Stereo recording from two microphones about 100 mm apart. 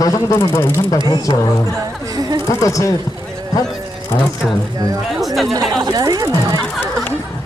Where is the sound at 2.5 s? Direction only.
30° left (ahead or behind).